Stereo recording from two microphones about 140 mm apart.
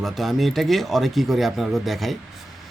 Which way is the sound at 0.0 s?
Centre (ahead or behind).